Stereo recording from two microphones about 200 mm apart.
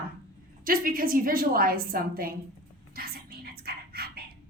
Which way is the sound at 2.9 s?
50° right (ahead or behind).